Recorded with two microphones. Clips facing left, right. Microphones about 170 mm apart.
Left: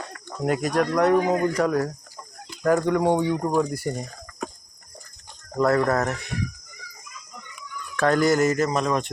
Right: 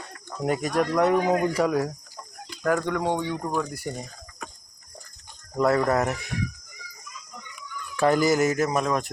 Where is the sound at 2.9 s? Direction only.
10° left (ahead or behind).